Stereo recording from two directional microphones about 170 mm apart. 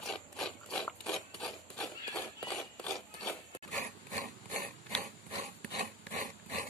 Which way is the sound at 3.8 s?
45° right (ahead or behind).